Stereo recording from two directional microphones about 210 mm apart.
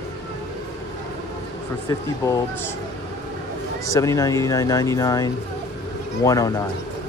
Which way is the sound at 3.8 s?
15° left (ahead or behind).